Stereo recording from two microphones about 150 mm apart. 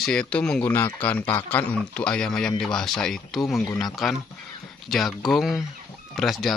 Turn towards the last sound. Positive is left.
turn(degrees=0)  # may be behind; listen again after turning